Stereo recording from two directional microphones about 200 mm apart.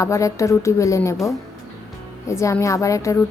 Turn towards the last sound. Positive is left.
turn(degrees=15)  # may be behind; listen again after turning